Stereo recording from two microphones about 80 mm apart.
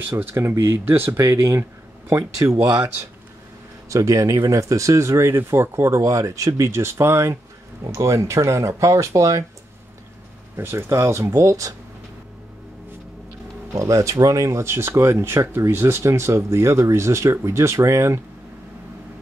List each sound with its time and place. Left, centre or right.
0.1 s speech: right
3.9 s speech: right
10.5 s speech: right
13.7 s speech: right